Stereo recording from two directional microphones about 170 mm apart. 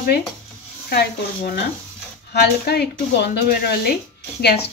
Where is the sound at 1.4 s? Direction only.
60° left (ahead or behind).